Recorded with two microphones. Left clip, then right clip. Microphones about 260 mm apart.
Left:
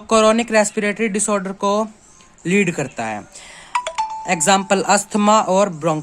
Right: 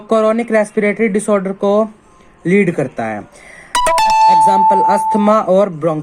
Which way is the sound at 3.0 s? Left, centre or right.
Centre.